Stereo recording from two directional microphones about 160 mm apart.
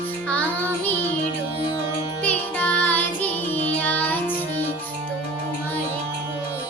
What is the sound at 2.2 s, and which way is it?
Music, 10° left (ahead or behind).